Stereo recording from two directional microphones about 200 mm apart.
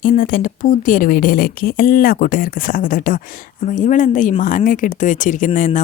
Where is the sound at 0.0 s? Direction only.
45° left (ahead or behind).